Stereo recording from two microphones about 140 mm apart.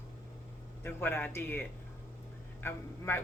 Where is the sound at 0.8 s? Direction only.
15° left (ahead or behind).